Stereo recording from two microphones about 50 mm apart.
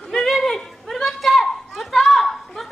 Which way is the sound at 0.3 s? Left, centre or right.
Centre.